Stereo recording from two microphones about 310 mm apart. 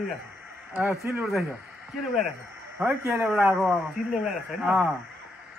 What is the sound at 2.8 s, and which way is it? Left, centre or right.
Speech, centre.